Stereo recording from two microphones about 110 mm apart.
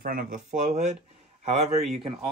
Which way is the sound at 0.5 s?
90° right.